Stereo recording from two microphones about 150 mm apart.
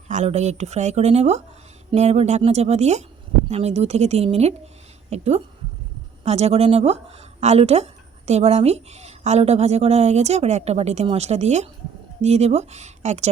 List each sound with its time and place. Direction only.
0.1 s a woman's voice: 50° right (ahead or behind)